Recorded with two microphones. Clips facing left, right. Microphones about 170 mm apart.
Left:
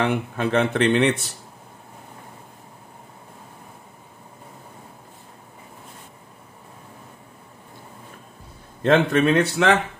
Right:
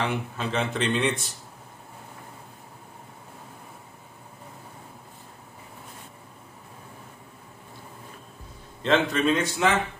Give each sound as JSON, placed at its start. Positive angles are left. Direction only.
{"t": 0.0, "sound": "speech", "side_deg": 60}
{"t": 8.8, "sound": "speech", "side_deg": 55}